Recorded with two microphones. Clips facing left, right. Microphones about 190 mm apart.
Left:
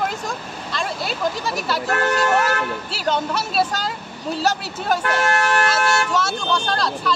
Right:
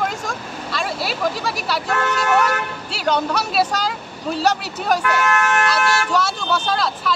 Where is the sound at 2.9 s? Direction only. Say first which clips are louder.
Right 4 dB; centre (ahead or behind).